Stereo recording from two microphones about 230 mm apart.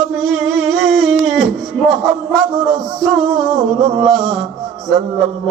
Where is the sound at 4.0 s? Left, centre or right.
Centre.